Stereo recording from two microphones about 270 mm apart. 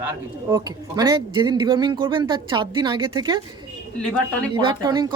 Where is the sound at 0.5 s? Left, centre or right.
Centre.